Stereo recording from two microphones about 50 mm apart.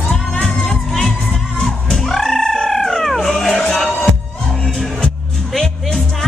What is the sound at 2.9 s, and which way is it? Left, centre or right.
Cat, centre.